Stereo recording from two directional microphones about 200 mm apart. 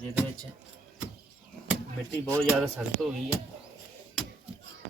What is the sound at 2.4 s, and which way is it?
Speech, centre (ahead or behind).